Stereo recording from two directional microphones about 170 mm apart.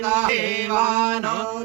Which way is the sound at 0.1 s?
10° right (ahead or behind).